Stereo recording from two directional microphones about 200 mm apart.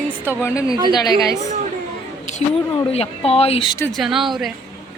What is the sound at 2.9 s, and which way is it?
Speech, 30° left (ahead or behind).